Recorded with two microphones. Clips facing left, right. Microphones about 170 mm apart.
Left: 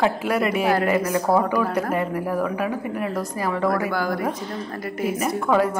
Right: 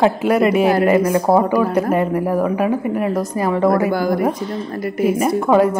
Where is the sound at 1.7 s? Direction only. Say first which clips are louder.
Right 6 dB; 25° right (ahead or behind).